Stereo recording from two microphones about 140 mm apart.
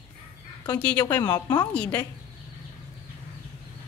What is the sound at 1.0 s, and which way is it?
Speech, 25° left (ahead or behind).